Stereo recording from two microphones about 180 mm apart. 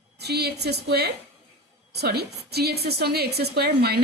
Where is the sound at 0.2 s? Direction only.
65° right (ahead or behind).